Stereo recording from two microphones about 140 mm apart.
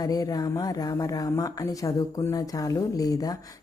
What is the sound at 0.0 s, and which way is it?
Speech, 25° left (ahead or behind).